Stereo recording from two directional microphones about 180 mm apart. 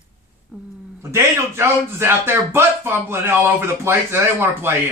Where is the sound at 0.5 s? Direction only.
5° right (ahead or behind).